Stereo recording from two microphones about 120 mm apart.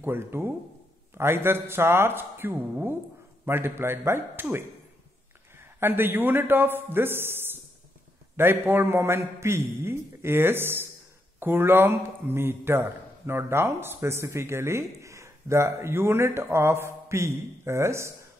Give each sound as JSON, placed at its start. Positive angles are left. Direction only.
{"t": 0.0, "sound": "a man's voice", "side_deg": -20}